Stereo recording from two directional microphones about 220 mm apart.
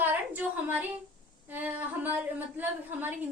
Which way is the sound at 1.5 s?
10° right (ahead or behind).